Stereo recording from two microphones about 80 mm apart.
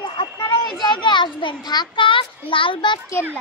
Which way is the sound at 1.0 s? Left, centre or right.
Left.